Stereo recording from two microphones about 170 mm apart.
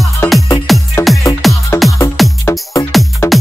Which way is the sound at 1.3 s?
20° left (ahead or behind).